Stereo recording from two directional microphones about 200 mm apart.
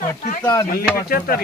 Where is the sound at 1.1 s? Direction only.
45° left (ahead or behind).